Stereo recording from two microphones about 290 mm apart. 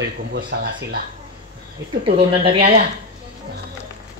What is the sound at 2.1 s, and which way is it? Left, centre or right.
Speech, centre.